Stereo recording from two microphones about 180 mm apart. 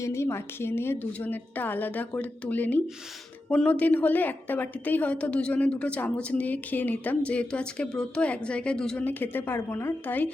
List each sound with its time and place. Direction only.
0.0 s a woman's voice: 15° left (ahead or behind)